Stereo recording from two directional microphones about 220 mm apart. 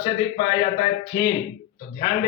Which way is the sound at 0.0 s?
25° left (ahead or behind).